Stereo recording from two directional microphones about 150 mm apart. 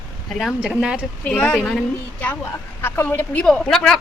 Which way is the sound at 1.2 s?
10° left (ahead or behind).